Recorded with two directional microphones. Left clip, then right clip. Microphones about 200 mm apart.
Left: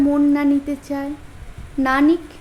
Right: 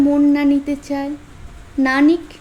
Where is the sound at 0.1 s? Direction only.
20° right (ahead or behind).